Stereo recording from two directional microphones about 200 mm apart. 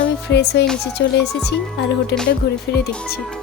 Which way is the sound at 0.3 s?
55° left (ahead or behind).